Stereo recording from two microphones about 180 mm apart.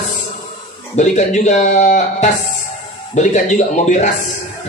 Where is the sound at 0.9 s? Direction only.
40° left (ahead or behind).